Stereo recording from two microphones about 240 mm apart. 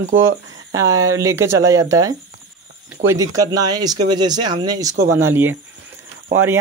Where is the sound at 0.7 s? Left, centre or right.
Centre.